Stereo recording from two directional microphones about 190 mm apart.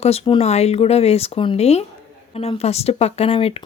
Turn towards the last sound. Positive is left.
turn(degrees=30)  # may be behind; listen again after turning